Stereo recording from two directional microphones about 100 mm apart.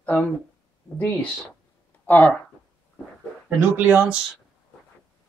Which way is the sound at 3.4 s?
15° right (ahead or behind).